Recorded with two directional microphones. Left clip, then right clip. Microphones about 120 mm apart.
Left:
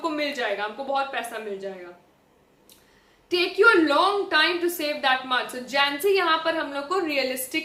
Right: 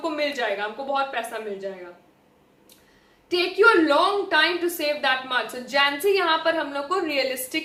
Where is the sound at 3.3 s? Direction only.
25° left (ahead or behind).